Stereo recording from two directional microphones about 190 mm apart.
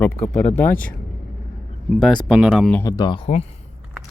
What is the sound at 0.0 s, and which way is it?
Speech, 10° left (ahead or behind).